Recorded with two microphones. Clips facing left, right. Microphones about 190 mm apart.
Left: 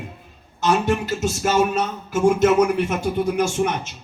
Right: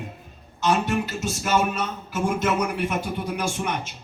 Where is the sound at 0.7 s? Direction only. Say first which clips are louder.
Left 3 dB; 50° left (ahead or behind).